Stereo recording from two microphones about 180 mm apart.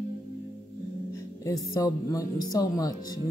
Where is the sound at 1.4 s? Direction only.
20° left (ahead or behind).